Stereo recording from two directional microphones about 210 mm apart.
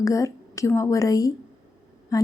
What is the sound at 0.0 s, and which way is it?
A woman's voice, 15° left (ahead or behind).